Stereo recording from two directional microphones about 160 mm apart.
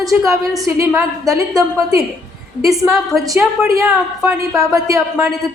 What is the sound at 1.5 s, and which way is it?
Speech, 20° right (ahead or behind).